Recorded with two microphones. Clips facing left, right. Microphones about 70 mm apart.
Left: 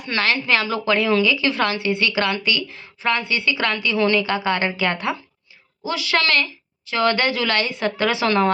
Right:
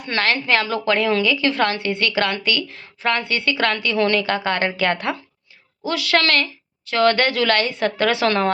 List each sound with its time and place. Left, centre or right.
0.0 s a woman's voice: right